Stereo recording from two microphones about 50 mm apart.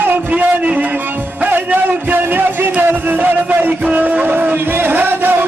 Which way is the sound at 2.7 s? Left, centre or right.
Right.